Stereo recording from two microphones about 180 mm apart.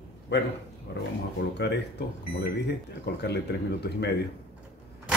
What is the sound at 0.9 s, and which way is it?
Speech, 65° left (ahead or behind).